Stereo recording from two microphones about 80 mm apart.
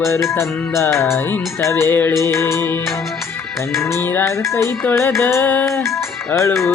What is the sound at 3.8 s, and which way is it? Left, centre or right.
Music, left.